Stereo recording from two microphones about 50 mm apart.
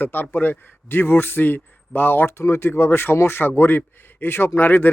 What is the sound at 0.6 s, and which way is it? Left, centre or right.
Speech, left.